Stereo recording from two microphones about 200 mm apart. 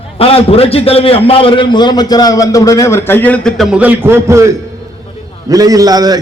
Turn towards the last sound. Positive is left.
turn(degrees=-20)  # may be behind; listen again after turning